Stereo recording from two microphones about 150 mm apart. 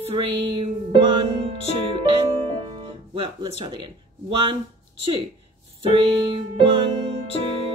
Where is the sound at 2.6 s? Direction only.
35° right (ahead or behind).